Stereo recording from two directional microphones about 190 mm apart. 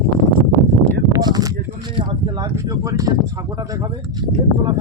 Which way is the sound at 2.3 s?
20° right (ahead or behind).